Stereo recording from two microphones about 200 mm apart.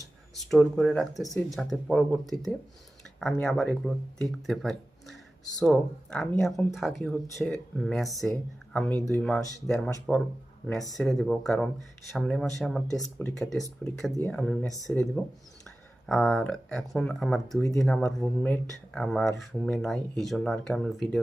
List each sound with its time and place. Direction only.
0.5 s speech: centre (ahead or behind)
10.9 s speech: centre (ahead or behind)
12.9 s speech: 15° left (ahead or behind)
13.4 s speech: centre (ahead or behind)